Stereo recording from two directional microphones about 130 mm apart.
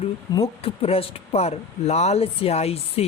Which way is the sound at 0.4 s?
50° left (ahead or behind).